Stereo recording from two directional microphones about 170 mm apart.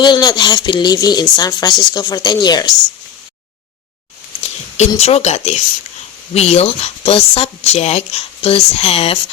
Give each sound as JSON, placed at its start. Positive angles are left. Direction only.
{"t": 0.0, "sound": "speech", "side_deg": 25}
{"t": 4.9, "sound": "speech", "side_deg": 40}